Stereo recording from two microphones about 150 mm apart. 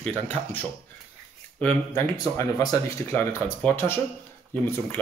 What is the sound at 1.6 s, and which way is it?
Speech, 20° left (ahead or behind).